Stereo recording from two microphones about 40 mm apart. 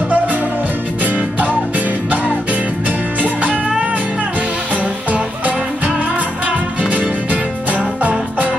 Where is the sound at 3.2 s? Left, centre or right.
Right.